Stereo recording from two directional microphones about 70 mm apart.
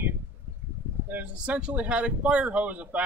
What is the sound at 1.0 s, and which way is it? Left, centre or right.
Speech, right.